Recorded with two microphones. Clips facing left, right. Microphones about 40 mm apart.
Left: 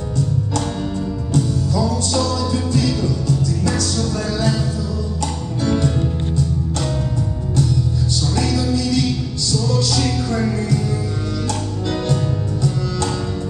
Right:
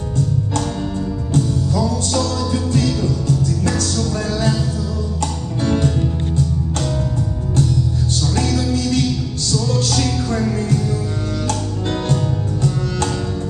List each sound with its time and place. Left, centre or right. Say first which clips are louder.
1.3 s music: right 1 dB; right
3.3 s music: right 1 dB; right
8.5 s music: even; right